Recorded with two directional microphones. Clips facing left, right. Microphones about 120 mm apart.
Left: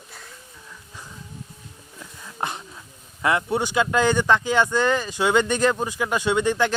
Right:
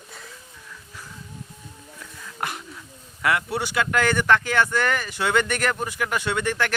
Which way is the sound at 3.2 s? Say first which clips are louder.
Left 2 dB; 20° left (ahead or behind).